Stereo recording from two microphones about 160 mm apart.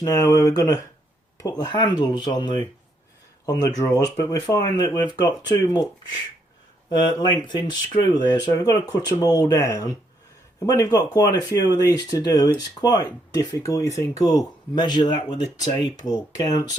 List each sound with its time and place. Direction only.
0.0 s speech: 20° left (ahead or behind)
6.9 s speech: 25° left (ahead or behind)